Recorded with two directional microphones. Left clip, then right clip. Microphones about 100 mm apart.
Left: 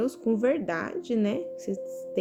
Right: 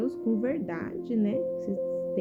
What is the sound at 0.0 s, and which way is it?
Speech, 35° left (ahead or behind).